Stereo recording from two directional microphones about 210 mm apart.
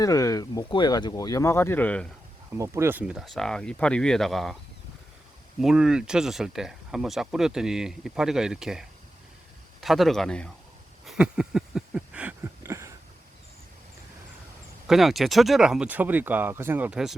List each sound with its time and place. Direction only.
0.0 s speech: 15° left (ahead or behind)
2.6 s speech: 10° right (ahead or behind)
5.5 s speech: 5° right (ahead or behind)
11.0 s a sound: centre (ahead or behind)
14.8 s speech: centre (ahead or behind)